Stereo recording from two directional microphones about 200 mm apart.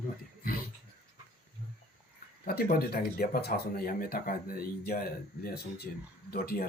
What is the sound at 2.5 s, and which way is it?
Speech, 50° left (ahead or behind).